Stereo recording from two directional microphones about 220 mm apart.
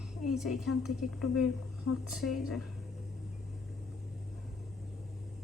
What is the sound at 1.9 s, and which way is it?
Speech, 90° left.